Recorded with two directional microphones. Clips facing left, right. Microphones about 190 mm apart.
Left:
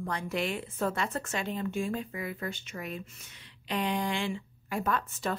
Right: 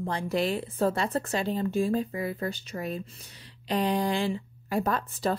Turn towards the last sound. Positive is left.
turn(degrees=-35)  # may be behind; listen again after turning